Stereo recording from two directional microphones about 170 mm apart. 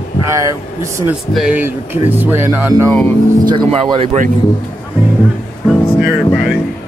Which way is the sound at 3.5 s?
30° right (ahead or behind).